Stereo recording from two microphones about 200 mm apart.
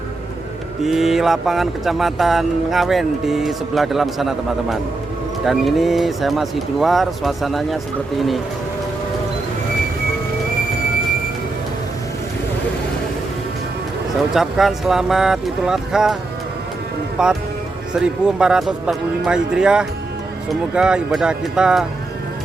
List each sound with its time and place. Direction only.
0.8 s speech: centre (ahead or behind)
14.2 s speech: centre (ahead or behind)
17.2 s speech: 5° right (ahead or behind)